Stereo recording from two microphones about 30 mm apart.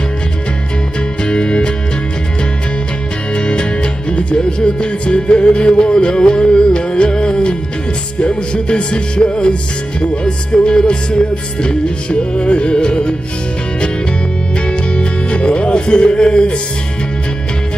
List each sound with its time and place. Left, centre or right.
1.2 s music: left
3.3 s music: left
14.7 s music: left